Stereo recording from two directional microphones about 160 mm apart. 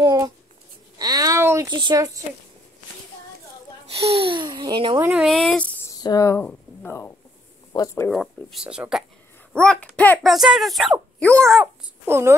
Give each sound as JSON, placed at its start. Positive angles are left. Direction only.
{"t": 0.0, "sound": "a sound", "side_deg": -25}
{"t": 1.7, "sound": "speech", "side_deg": -25}
{"t": 3.9, "sound": "a child's voice", "side_deg": -40}
{"t": 5.0, "sound": "speech", "side_deg": -5}
{"t": 5.9, "sound": "speech", "side_deg": 20}
{"t": 8.1, "sound": "speech", "side_deg": 0}
{"t": 9.5, "sound": "speech", "side_deg": 5}
{"t": 11.6, "sound": "a child's voice", "side_deg": -15}